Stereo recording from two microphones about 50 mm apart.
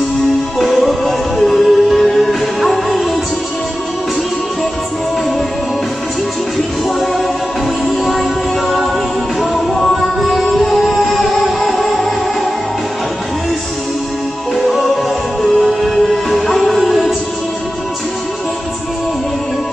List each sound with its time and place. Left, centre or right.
0.6 s music: centre
7.8 s music: centre
15.4 s music: centre